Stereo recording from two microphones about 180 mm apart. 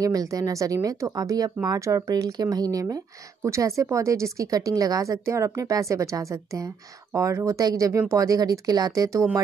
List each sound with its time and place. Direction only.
0.0 s speech: 20° right (ahead or behind)